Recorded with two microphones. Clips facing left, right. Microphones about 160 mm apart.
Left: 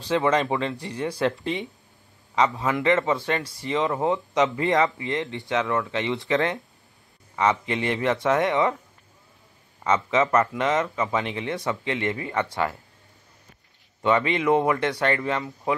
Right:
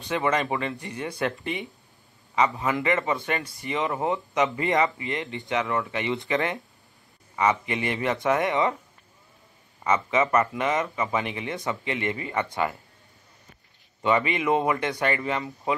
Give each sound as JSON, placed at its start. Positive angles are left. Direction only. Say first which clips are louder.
{"t": 0.2, "sound": "speech", "louder": "left 3 dB", "side_deg": 0}
{"t": 2.3, "sound": "speech", "louder": "left 1 dB", "side_deg": -5}
{"t": 9.8, "sound": "speech", "louder": "left 1 dB", "side_deg": -10}
{"t": 14.0, "sound": "speech", "louder": "left 2 dB", "side_deg": -10}